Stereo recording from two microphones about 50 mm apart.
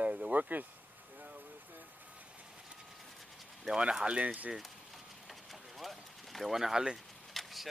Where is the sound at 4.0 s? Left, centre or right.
Right.